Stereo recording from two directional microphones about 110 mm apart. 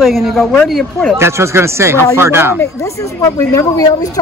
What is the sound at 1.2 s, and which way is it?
Speech, 25° right (ahead or behind).